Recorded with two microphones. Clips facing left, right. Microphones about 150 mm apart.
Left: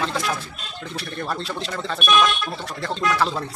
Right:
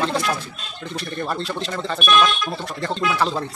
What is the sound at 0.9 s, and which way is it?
Speech, centre (ahead or behind).